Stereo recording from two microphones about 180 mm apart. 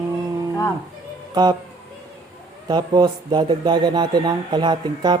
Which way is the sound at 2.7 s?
25° right (ahead or behind).